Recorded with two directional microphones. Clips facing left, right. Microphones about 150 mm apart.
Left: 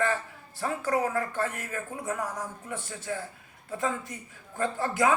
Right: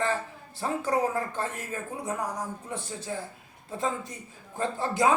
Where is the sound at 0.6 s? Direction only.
20° right (ahead or behind).